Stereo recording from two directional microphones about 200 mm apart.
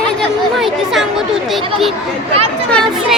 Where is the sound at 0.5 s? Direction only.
Centre (ahead or behind).